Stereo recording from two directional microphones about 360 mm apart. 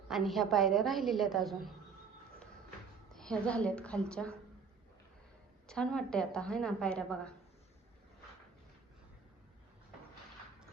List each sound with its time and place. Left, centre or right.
0.1 s a woman's voice: centre
2.4 s a sound: centre
5.6 s a woman's voice: centre